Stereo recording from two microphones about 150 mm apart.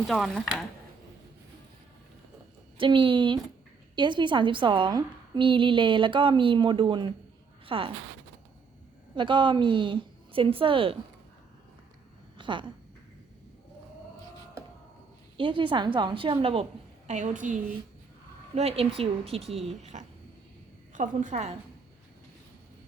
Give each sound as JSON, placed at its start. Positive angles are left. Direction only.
{"t": 0.1, "sound": "speech", "side_deg": 0}
{"t": 2.7, "sound": "a woman's voice", "side_deg": -35}
{"t": 9.1, "sound": "a woman's voice", "side_deg": -35}
{"t": 12.4, "sound": "speech", "side_deg": -35}
{"t": 15.4, "sound": "a woman's voice", "side_deg": -35}
{"t": 17.1, "sound": "a woman's voice", "side_deg": -55}
{"t": 18.5, "sound": "a woman's voice", "side_deg": -45}